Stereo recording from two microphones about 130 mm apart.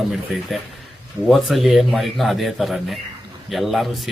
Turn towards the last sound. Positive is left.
turn(degrees=0)  # may be behind; listen again after turning